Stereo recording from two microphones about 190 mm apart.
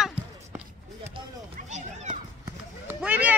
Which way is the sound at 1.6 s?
40° right (ahead or behind).